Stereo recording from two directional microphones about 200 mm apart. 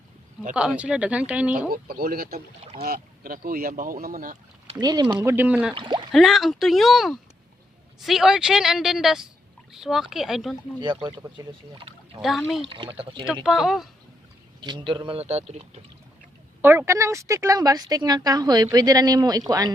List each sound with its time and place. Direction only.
0.5 s a woman's voice: 5° right (ahead or behind)
1.5 s speech: 45° right (ahead or behind)
4.8 s a woman's voice: 20° right (ahead or behind)
5.7 s speech: 25° right (ahead or behind)
6.1 s speech: centre (ahead or behind)
10.8 s speech: 25° right (ahead or behind)
13.4 s speech: centre (ahead or behind)
14.6 s speech: 25° right (ahead or behind)
16.6 s a woman's voice: 10° right (ahead or behind)